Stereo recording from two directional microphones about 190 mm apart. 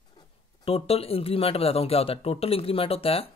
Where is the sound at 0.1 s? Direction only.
25° left (ahead or behind).